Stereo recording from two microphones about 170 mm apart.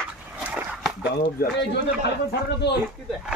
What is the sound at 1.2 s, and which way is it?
Speech, 70° left (ahead or behind).